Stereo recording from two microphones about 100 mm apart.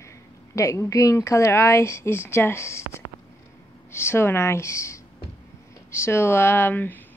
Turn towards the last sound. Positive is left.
turn(degrees=20)  # may be behind; listen again after turning